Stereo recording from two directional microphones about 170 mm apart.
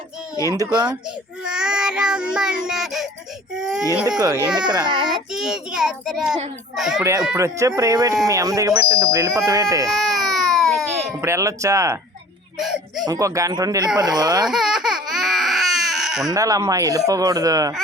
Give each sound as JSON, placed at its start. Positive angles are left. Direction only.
{"t": 0.4, "sound": "speech", "side_deg": -20}
{"t": 1.5, "sound": "child singing", "side_deg": -5}
{"t": 4.2, "sound": "speech", "side_deg": -20}
{"t": 5.3, "sound": "child singing", "side_deg": -5}
{"t": 7.3, "sound": "speech", "side_deg": -15}
{"t": 9.9, "sound": "baby cry", "side_deg": 0}
{"t": 11.2, "sound": "speech", "side_deg": -15}
{"t": 12.5, "sound": "speech", "side_deg": 0}
{"t": 13.1, "sound": "speech", "side_deg": -20}
{"t": 14.4, "sound": "baby cry", "side_deg": -5}
{"t": 16.3, "sound": "speech", "side_deg": -20}